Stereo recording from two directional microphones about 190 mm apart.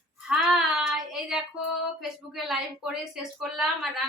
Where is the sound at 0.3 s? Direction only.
Centre (ahead or behind).